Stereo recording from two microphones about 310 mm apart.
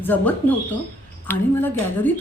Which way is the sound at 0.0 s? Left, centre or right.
Centre.